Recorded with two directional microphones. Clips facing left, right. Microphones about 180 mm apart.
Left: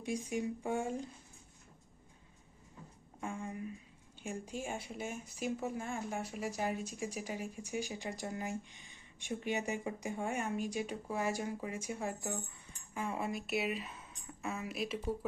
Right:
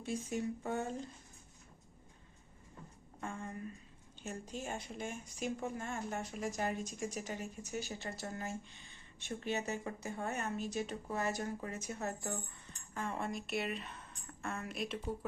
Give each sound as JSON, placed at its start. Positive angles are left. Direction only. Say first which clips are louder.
{"t": 0.0, "sound": "speech", "louder": "left 1 dB", "side_deg": 15}
{"t": 3.2, "sound": "speech", "louder": "left 2 dB", "side_deg": 10}